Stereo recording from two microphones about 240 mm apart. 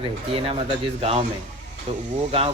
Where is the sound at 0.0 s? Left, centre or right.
Right.